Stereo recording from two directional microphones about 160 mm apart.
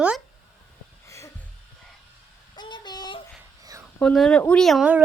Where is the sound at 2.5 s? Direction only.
25° left (ahead or behind).